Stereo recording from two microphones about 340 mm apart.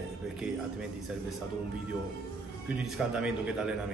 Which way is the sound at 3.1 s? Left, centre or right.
Centre.